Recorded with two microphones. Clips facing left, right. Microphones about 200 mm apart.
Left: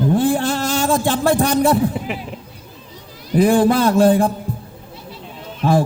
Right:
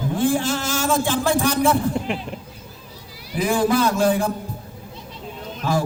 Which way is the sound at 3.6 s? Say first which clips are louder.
Left 3 dB; 55° left (ahead or behind).